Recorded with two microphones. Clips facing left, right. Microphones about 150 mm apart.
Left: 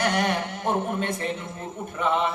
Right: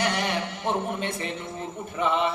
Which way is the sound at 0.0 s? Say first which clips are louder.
Left 2 dB; 50° left (ahead or behind).